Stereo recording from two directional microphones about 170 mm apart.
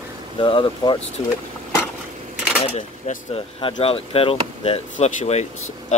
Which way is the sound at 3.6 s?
30° left (ahead or behind).